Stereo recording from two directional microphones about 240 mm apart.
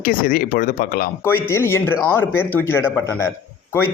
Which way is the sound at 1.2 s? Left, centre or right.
Centre.